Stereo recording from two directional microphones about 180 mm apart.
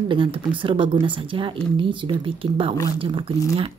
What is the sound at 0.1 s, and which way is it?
Speech, 30° right (ahead or behind).